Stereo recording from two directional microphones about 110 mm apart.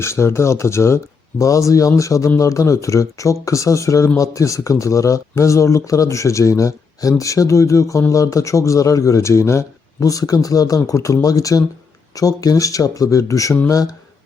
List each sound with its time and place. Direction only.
0.0 s speech: 25° left (ahead or behind)